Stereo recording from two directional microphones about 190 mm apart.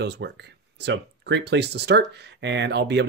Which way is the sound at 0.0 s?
65° right (ahead or behind).